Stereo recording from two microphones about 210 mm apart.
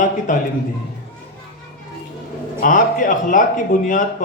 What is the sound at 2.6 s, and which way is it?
Speech, 40° left (ahead or behind).